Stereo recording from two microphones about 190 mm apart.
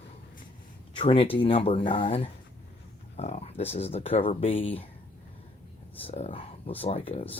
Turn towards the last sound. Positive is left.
turn(degrees=30)  # may be behind; listen again after turning